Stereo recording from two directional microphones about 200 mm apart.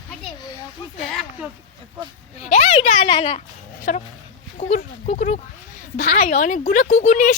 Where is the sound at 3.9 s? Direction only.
40° left (ahead or behind).